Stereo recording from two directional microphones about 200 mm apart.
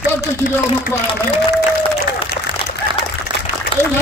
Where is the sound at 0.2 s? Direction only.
45° left (ahead or behind).